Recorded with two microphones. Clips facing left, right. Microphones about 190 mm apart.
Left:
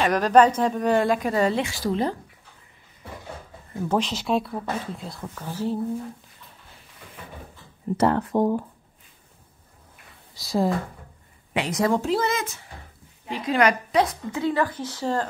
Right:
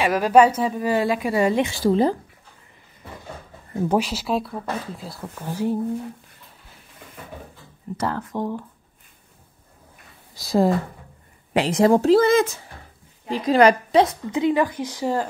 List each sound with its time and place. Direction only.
0.0 s a woman's voice: 10° right (ahead or behind)
1.7 s speech: 30° right (ahead or behind)
3.9 s a woman's voice: 10° right (ahead or behind)
8.1 s speech: 30° left (ahead or behind)
10.3 s a woman's voice: 50° right (ahead or behind)
11.5 s a woman's voice: 30° right (ahead or behind); by 15.2 s 10° right (ahead or behind)